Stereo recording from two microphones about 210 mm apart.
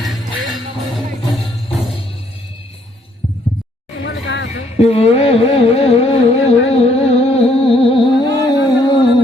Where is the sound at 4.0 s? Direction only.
60° left (ahead or behind).